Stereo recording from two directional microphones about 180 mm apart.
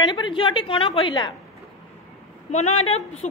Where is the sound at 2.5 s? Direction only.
40° left (ahead or behind).